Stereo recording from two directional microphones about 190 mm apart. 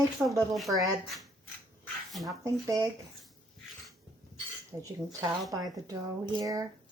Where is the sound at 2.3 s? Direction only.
20° right (ahead or behind).